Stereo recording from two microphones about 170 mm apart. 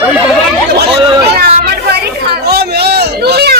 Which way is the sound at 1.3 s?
65° right (ahead or behind).